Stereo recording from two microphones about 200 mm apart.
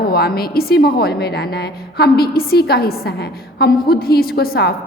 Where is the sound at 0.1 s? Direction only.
50° left (ahead or behind).